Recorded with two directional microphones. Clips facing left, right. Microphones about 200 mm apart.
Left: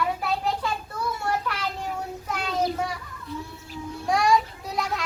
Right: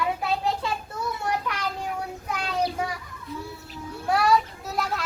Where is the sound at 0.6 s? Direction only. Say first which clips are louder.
Even; 20° right (ahead or behind).